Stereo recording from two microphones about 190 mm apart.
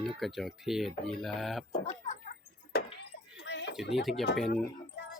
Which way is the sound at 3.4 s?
65° left (ahead or behind).